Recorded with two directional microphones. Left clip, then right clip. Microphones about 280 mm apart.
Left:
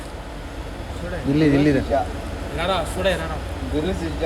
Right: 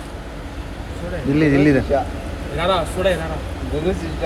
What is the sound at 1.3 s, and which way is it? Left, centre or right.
Speech, left.